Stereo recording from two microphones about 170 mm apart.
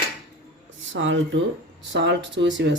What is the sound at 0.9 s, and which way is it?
Speech, 90° right.